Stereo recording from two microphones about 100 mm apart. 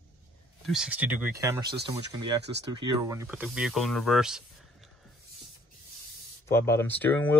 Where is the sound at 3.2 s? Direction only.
15° right (ahead or behind).